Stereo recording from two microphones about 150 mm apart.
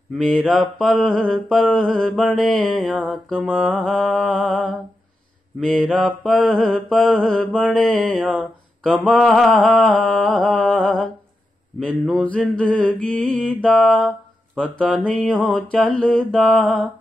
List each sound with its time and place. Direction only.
0.2 s mantra: 5° left (ahead or behind)